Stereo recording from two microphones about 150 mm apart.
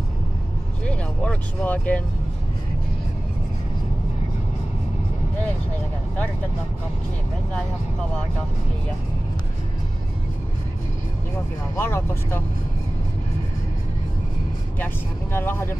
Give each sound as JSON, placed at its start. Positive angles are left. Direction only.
{"t": 0.8, "sound": "speech", "side_deg": 5}
{"t": 11.7, "sound": "speech", "side_deg": 15}
{"t": 15.3, "sound": "speech", "side_deg": 15}